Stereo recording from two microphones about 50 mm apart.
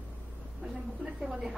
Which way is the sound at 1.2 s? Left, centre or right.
Centre.